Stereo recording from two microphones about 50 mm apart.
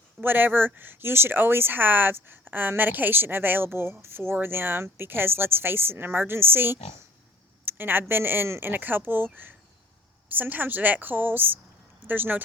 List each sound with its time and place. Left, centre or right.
0.2 s a woman's voice: right